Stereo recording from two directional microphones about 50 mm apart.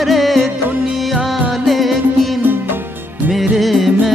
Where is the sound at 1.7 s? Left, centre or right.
Centre.